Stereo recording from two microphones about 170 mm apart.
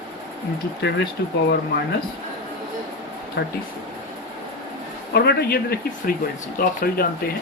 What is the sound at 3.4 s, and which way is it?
Speech, 80° left.